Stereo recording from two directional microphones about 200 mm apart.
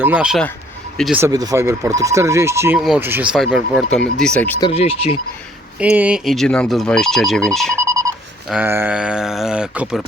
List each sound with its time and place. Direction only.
0.0 s speech: 5° right (ahead or behind)
1.2 s speech: 20° right (ahead or behind); by 4.5 s 5° left (ahead or behind)
4.6 s speech: 30° left (ahead or behind)
5.8 s speech: 5° right (ahead or behind)
7.8 s telephone: 15° right (ahead or behind)
8.4 s speech: 10° right (ahead or behind)